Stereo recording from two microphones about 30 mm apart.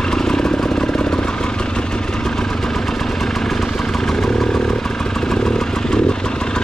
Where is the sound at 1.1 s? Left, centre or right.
Left.